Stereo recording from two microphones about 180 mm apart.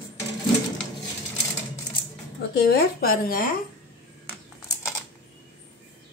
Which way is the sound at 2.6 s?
55° left (ahead or behind).